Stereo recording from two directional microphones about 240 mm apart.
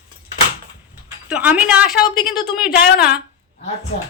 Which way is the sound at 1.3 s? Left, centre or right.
Centre.